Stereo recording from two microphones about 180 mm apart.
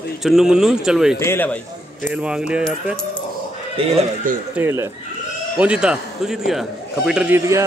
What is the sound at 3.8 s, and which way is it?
Speech, 30° right (ahead or behind).